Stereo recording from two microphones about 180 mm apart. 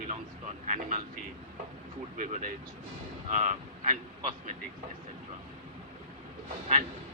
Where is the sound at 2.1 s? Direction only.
45° right (ahead or behind).